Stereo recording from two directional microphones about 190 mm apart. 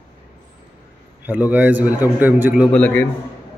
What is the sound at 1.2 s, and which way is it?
A man's voice, 10° right (ahead or behind).